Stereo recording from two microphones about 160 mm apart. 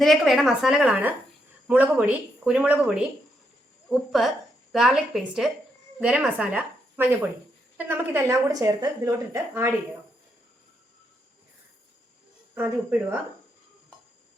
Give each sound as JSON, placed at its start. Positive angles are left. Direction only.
{"t": 0.0, "sound": "a woman's voice", "side_deg": 0}
{"t": 12.5, "sound": "speech", "side_deg": -15}